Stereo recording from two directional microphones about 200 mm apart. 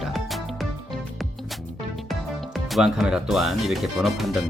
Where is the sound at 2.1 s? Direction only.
Centre (ahead or behind).